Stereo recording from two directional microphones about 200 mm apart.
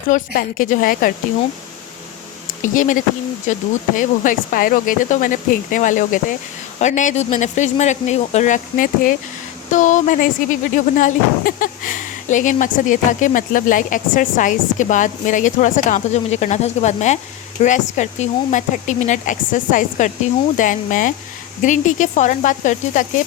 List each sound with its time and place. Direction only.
0.1 s a woman's voice: 40° left (ahead or behind)
2.6 s speech: 40° left (ahead or behind)